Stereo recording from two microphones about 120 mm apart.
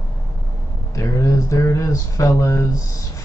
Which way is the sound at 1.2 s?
25° left (ahead or behind).